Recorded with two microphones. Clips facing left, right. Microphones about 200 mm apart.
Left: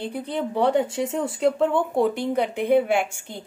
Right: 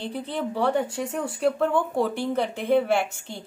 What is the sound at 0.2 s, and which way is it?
A woman's voice, 20° left (ahead or behind).